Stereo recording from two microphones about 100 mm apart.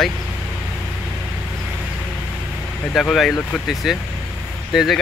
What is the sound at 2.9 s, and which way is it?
Speech, centre (ahead or behind).